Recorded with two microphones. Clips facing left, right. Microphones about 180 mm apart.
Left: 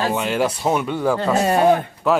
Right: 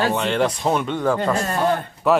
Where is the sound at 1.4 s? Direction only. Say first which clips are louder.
Left 5 dB; 70° left (ahead or behind).